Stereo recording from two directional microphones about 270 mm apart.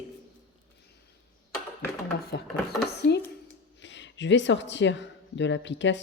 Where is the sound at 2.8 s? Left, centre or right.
Left.